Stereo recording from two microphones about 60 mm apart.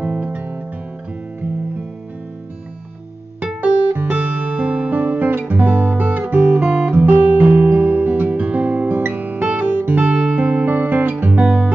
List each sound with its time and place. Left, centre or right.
0.0 s music: right
3.6 s music: right
5.6 s guitar: right
6.7 s music: right